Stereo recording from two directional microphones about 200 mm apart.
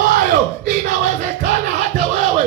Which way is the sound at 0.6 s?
40° right (ahead or behind).